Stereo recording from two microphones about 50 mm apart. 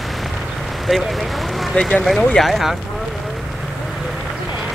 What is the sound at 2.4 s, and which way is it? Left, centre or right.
Speech, centre.